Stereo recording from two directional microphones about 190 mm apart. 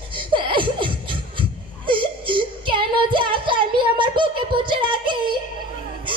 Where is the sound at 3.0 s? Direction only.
25° right (ahead or behind).